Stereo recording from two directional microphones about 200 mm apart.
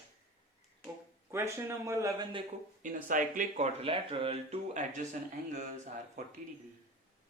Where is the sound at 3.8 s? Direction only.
25° right (ahead or behind).